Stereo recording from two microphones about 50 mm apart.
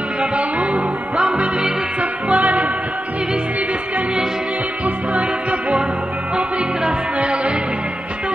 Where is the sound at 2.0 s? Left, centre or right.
Right.